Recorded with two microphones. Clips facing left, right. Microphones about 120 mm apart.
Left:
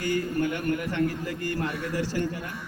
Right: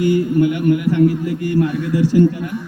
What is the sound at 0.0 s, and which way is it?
A man's voice, 15° right (ahead or behind).